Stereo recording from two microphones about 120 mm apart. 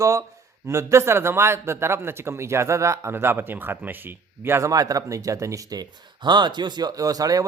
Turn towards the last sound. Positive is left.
turn(degrees=-30)  # may be behind; listen again after turning